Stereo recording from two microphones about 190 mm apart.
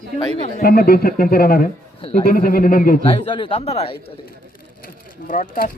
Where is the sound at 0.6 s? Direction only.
50° left (ahead or behind).